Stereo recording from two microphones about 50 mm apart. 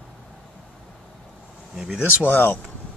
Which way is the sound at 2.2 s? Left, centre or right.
Left.